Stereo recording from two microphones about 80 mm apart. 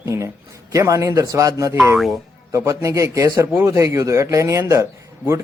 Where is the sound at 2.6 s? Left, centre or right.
Right.